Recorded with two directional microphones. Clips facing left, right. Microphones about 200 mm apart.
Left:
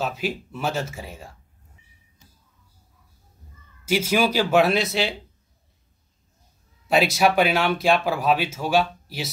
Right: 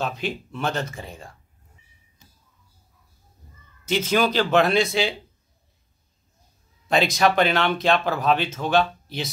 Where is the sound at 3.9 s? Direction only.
10° left (ahead or behind).